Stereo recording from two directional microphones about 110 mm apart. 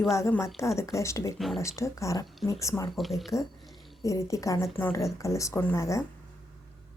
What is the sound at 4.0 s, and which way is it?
A woman's voice, 30° left (ahead or behind).